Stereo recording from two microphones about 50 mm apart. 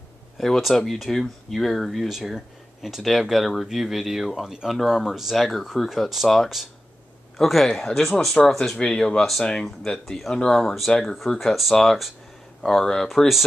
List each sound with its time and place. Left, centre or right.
0.4 s speech: centre
2.0 s speech: centre
10.5 s speech: centre